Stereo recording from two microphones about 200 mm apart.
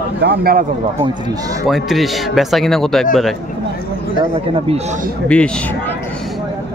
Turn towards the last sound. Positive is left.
turn(degrees=5)  # may be behind; listen again after turning